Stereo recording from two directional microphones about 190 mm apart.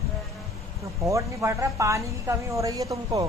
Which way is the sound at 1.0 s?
15° right (ahead or behind).